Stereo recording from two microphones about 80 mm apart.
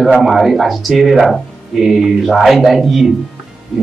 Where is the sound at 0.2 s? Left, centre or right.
Centre.